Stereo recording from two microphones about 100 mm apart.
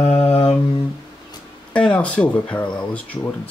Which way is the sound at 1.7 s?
10° left (ahead or behind).